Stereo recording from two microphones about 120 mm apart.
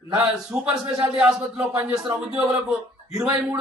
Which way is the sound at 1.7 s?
25° right (ahead or behind).